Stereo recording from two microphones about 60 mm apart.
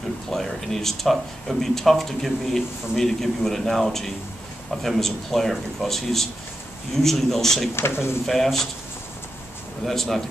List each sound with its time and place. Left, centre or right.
0.3 s speech: centre
7.7 s speech: left
8.3 s speech: centre
9.8 s speech: centre